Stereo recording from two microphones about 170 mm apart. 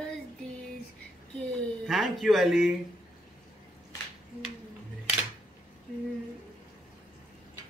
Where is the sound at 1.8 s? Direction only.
Centre (ahead or behind).